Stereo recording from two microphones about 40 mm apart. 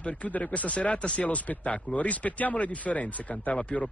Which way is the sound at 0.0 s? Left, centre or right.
Left.